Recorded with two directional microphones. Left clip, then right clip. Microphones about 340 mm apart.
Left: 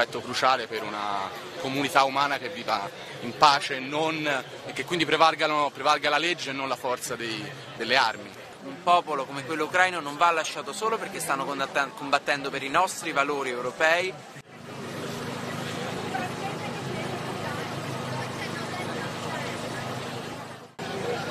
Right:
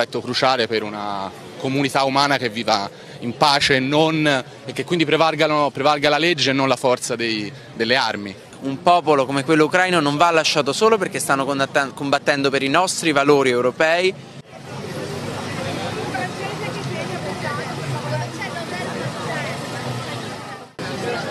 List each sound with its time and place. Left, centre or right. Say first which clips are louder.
0.0 s a man's voice: right 5 dB; right